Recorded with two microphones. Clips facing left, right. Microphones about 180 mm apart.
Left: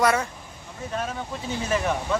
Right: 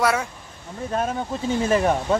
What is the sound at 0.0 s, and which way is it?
Speech, 5° right (ahead or behind).